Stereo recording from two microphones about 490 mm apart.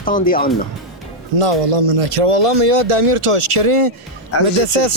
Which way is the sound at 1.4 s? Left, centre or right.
Right.